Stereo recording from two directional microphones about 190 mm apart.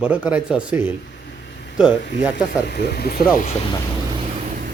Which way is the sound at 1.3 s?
60° left (ahead or behind).